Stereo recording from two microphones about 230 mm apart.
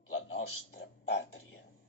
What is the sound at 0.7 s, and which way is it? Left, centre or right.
Speech, left.